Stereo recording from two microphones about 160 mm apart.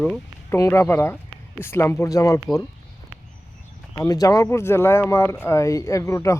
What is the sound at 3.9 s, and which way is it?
Speech, 20° left (ahead or behind).